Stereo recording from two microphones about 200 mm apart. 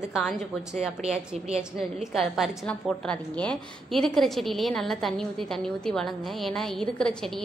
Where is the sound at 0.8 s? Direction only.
5° right (ahead or behind).